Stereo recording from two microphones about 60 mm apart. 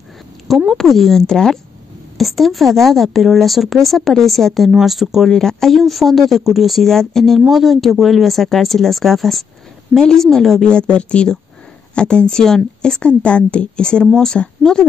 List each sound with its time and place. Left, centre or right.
0.7 s speech: centre
5.3 s a woman's voice: centre
10.7 s a woman's voice: centre